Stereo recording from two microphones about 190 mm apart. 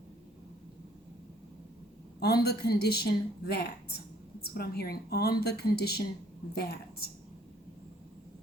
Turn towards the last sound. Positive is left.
turn(degrees=55)  # may be behind; listen again after turning